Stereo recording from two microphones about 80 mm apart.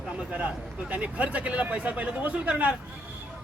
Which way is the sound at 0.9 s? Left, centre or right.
Centre.